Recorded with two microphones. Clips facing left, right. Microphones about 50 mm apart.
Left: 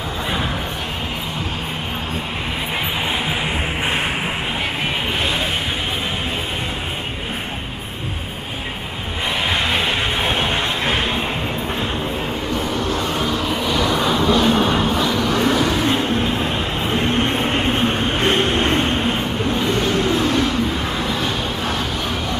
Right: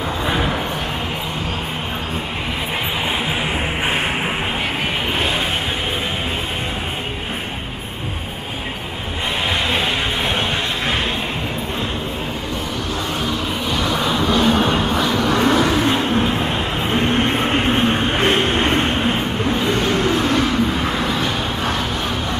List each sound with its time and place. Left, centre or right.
9.5 s music: centre
13.9 s vehicle: centre
14.3 s vehicle: right
15.1 s vehicle: right
16.2 s vehicle: centre
19.4 s vehicle: right